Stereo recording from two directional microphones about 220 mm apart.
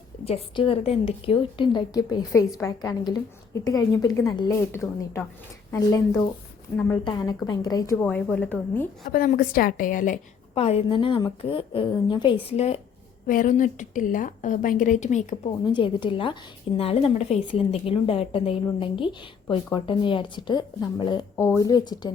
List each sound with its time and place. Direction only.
0.3 s a woman's voice: 25° left (ahead or behind); by 8.9 s 10° left (ahead or behind)
9.0 s a woman's voice: 40° left (ahead or behind)
15.6 s a woman's voice: 20° left (ahead or behind)